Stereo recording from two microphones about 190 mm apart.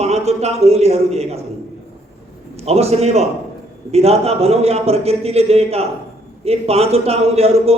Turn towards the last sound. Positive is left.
turn(degrees=-30)  # may be behind; listen again after turning